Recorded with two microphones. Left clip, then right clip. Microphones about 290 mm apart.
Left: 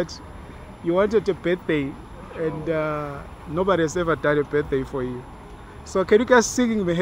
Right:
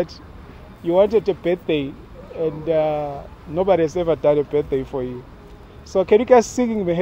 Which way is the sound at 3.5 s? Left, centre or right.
Right.